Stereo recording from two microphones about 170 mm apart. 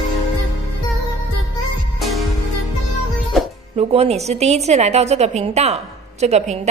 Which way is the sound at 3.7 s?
35° right (ahead or behind).